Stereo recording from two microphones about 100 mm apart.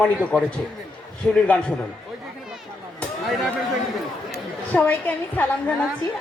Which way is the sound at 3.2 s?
Centre (ahead or behind).